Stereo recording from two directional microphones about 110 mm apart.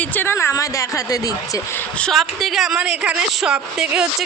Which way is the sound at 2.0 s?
Centre (ahead or behind).